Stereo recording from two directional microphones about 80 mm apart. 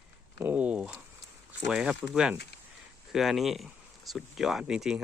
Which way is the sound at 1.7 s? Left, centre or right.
Centre.